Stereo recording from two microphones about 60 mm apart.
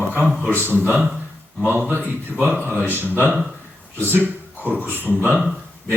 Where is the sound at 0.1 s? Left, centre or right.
Right.